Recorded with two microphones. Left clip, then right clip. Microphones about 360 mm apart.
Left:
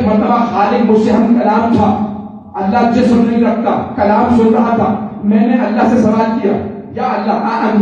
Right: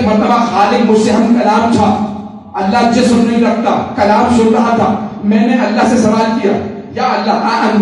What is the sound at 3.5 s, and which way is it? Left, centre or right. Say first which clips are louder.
Speech: right 2 dB; centre.